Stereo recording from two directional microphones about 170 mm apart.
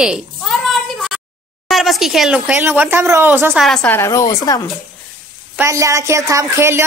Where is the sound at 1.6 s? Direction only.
Centre (ahead or behind).